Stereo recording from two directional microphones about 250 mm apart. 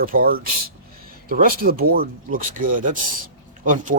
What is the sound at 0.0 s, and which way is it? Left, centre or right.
Speech, right.